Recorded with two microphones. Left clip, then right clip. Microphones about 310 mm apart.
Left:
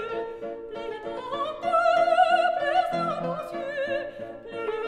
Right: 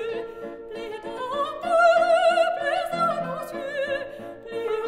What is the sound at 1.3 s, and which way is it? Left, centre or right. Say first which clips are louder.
Opera: right 2 dB; right.